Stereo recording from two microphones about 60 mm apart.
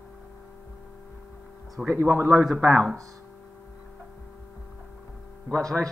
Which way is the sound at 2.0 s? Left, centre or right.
Right.